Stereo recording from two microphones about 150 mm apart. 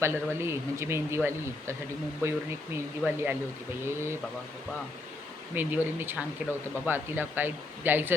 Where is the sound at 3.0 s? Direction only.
5° left (ahead or behind).